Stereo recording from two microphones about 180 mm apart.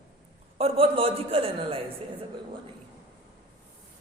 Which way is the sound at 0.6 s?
30° right (ahead or behind).